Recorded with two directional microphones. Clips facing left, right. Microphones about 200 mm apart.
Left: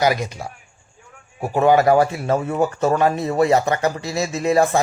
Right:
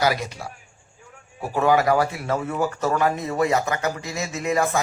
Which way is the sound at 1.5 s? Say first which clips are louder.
Left 4 dB; 25° left (ahead or behind).